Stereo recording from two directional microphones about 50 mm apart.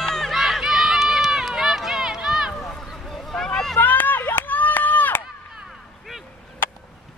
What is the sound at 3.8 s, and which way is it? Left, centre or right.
Run, left.